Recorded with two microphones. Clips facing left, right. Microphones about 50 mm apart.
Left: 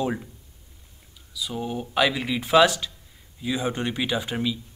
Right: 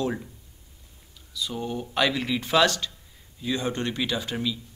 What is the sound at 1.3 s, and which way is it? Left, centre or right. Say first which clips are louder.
Speech: left 1 dB; centre.